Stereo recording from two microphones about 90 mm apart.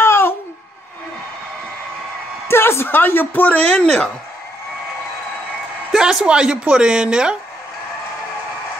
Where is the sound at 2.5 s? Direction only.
25° left (ahead or behind).